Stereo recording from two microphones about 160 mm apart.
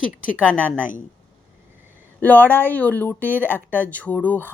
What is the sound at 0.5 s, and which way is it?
Speech, 10° right (ahead or behind).